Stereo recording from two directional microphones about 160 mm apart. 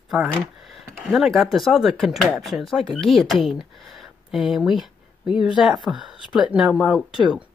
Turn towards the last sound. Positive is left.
turn(degrees=-5)  # may be behind; listen again after turning